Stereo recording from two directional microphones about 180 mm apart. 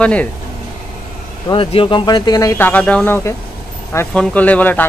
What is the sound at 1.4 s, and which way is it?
Speech, 30° left (ahead or behind).